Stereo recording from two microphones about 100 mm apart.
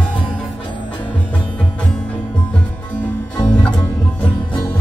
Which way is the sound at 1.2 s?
10° left (ahead or behind).